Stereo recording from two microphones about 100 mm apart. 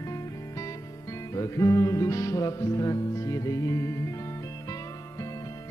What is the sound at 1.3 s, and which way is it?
Music, 35° left (ahead or behind).